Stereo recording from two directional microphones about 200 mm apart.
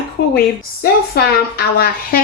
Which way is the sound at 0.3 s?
50° left (ahead or behind).